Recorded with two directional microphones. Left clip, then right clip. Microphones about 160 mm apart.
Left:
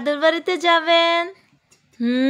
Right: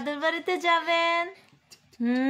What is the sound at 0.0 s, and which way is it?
A woman's voice, 35° left (ahead or behind).